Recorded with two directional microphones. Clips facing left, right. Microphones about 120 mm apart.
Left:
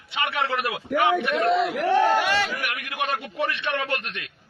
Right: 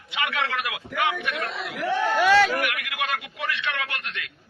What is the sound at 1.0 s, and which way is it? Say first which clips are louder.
Speech: left 5 dB; 40° left (ahead or behind).